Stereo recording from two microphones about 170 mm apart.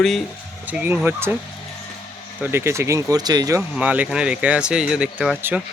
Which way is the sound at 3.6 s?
10° right (ahead or behind).